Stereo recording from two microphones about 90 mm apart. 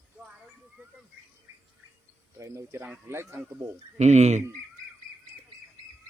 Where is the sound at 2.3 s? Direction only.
35° right (ahead or behind).